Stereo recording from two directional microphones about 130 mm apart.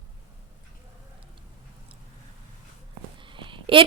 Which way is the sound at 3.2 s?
40° right (ahead or behind).